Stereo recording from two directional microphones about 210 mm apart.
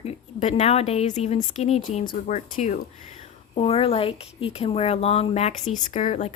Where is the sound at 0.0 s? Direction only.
30° left (ahead or behind).